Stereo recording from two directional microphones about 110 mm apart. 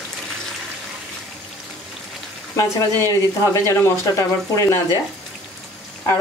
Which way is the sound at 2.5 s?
25° left (ahead or behind).